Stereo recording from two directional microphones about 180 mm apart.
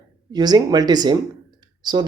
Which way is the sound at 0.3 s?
25° right (ahead or behind).